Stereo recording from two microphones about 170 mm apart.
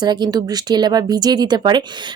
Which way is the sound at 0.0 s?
25° right (ahead or behind).